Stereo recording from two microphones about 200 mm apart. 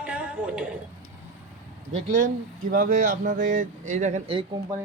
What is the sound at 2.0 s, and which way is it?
Speech, 40° right (ahead or behind).